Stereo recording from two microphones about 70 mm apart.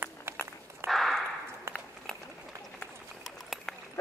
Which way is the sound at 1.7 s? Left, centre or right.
Right.